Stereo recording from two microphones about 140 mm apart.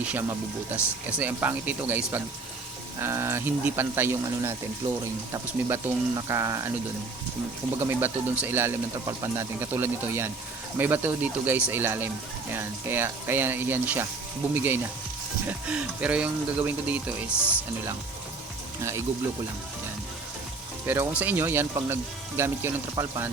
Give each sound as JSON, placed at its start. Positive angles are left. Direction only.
{"t": 0.0, "sound": "speech", "side_deg": -15}
{"t": 5.3, "sound": "speech", "side_deg": -25}
{"t": 7.8, "sound": "speech", "side_deg": -15}
{"t": 18.8, "sound": "speech", "side_deg": -20}
{"t": 20.8, "sound": "speech", "side_deg": -15}